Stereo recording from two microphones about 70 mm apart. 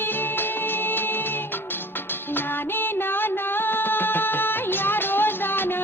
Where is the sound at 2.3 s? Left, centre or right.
Left.